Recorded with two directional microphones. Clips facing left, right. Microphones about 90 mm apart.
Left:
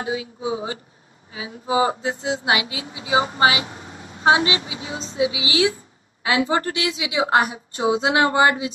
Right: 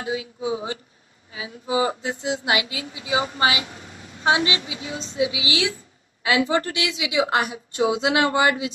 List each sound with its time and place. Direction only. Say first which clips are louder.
0.0 s a woman's voice: left 1 dB; 30° left (ahead or behind)